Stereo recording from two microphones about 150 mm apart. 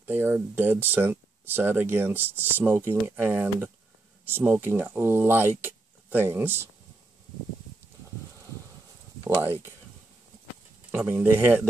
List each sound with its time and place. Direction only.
0.0 s speech: 15° right (ahead or behind)
9.4 s speech: 15° right (ahead or behind)
10.9 s speech: 10° right (ahead or behind)